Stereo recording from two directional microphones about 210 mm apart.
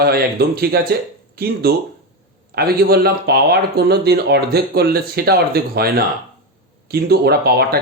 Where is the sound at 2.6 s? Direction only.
45° right (ahead or behind).